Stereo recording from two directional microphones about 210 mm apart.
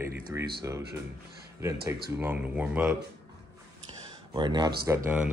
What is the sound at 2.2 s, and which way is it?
Speech, 10° right (ahead or behind).